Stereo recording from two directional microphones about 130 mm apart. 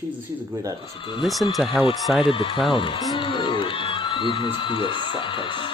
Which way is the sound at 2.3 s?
40° left (ahead or behind).